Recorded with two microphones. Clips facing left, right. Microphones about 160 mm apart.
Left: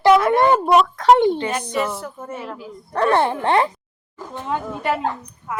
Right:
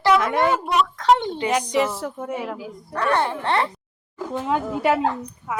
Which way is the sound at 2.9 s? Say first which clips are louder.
Left 4 dB; 25° left (ahead or behind).